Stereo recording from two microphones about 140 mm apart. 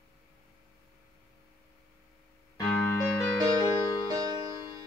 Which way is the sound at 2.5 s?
15° left (ahead or behind).